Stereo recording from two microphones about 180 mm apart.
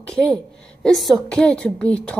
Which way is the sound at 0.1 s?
5° left (ahead or behind).